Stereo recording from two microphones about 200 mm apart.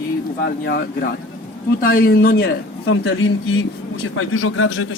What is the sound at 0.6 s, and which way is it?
A man's voice, 55° left (ahead or behind).